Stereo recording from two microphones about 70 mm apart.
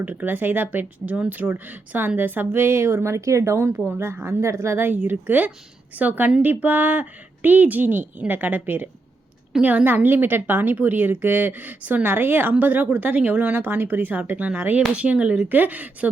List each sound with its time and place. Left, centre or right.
0.0 s speech: right